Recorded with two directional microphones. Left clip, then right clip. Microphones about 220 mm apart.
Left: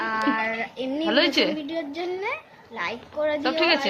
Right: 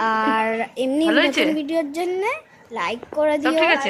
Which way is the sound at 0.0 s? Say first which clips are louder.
Right 5 dB; 35° right (ahead or behind).